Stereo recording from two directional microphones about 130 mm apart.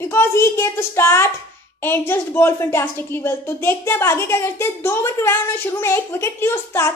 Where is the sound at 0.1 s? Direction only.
20° left (ahead or behind).